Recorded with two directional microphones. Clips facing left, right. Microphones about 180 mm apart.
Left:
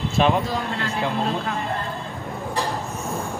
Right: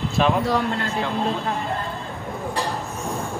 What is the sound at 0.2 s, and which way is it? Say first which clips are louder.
Speech: left 1 dB; centre (ahead or behind).